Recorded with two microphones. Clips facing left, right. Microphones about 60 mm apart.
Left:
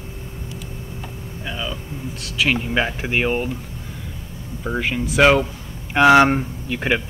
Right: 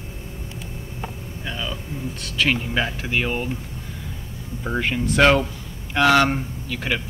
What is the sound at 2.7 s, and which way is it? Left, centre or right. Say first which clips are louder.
Speech: left 3 dB; left.